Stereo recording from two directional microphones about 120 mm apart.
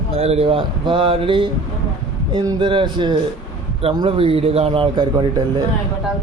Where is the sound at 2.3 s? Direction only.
35° right (ahead or behind).